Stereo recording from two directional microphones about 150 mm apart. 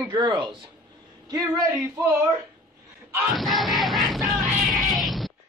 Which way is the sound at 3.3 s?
Centre (ahead or behind).